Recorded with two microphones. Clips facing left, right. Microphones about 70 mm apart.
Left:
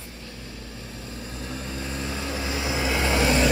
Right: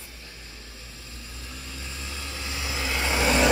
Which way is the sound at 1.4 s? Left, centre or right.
Left.